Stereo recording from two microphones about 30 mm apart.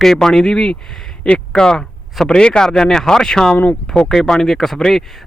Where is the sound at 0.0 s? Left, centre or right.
Centre.